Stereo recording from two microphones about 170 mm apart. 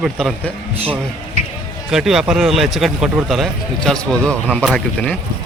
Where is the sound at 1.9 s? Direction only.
5° right (ahead or behind).